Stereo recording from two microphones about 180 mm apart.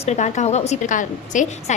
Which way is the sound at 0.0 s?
40° left (ahead or behind).